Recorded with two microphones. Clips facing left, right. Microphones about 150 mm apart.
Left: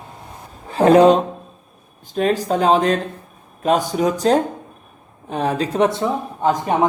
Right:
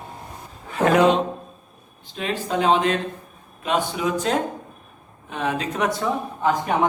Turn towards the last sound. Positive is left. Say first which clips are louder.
# left 3 dB
turn(degrees=30)  # may be behind; listen again after turning